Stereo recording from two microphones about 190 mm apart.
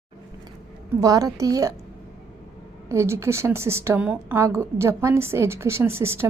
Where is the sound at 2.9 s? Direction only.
15° right (ahead or behind).